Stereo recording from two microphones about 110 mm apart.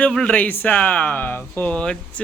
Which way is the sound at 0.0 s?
10° left (ahead or behind).